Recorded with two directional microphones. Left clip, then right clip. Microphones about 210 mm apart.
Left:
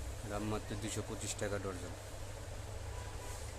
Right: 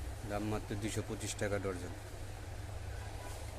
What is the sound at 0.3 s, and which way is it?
Speech, 10° right (ahead or behind).